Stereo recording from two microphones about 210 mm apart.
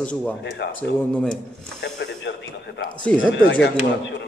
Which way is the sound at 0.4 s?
55° left (ahead or behind).